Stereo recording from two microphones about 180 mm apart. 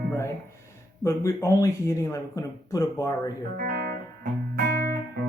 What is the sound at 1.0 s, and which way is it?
Speech, 15° left (ahead or behind).